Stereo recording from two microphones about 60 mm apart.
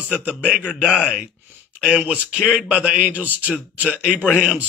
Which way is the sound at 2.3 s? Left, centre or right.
Centre.